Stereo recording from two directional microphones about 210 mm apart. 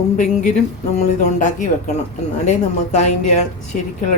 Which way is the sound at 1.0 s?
35° left (ahead or behind).